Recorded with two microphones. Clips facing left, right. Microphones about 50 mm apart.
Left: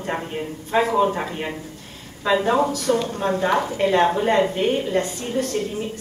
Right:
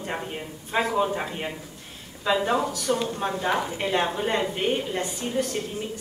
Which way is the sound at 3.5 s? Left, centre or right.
Left.